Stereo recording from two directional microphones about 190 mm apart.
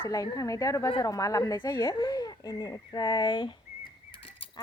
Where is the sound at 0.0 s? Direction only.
20° left (ahead or behind).